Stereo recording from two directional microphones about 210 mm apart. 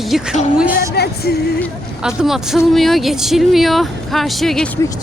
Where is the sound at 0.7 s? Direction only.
50° left (ahead or behind).